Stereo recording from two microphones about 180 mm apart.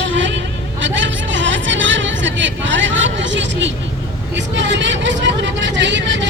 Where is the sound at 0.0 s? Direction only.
90° right.